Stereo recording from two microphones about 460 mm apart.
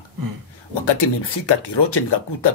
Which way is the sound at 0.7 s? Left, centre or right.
Left.